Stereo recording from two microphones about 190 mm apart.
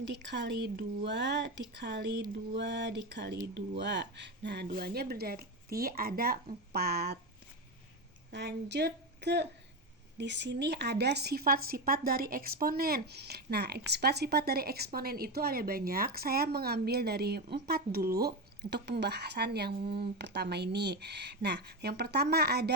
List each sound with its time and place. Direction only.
0.0 s speech: 65° right (ahead or behind)
8.3 s speech: 65° right (ahead or behind)